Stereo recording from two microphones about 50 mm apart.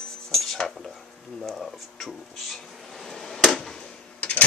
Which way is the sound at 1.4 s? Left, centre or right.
Centre.